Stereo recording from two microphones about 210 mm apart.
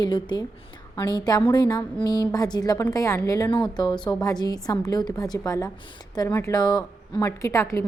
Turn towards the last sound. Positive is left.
turn(degrees=15)  # may be behind; listen again after turning